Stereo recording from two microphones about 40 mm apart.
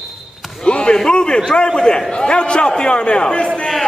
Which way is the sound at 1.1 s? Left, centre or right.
Left.